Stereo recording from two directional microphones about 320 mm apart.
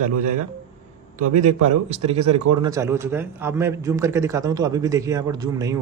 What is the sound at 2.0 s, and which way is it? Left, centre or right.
Speech, centre.